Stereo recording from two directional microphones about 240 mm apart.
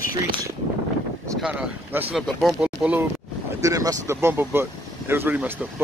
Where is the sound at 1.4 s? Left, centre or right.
Centre.